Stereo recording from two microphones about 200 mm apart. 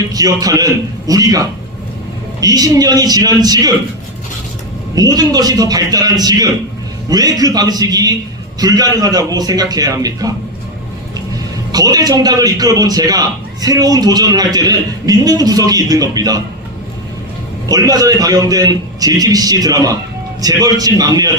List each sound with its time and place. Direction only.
0.1 s a man's voice: 20° right (ahead or behind)
4.9 s a man's voice: 20° right (ahead or behind)
11.7 s a man's voice: 20° right (ahead or behind)
17.7 s a man's voice: 20° right (ahead or behind)